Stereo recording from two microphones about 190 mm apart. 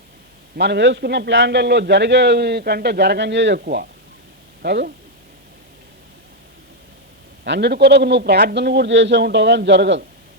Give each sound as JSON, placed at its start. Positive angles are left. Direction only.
{"t": 0.5, "sound": "a man's voice", "side_deg": -65}
{"t": 7.4, "sound": "a man's voice", "side_deg": -65}